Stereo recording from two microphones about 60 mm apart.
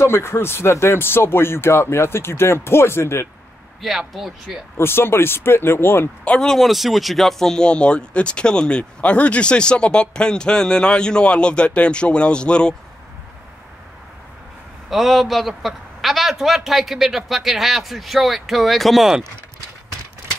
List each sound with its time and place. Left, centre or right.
0.0 s speech: left
4.1 s a man's voice: centre
4.7 s speech: left
6.4 s speech: centre
14.9 s a man's voice: centre